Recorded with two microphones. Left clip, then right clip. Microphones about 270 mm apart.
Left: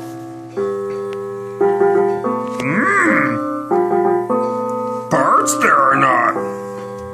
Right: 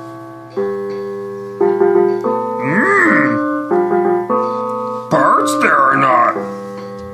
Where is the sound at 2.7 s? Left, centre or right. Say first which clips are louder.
Right 2 dB; centre.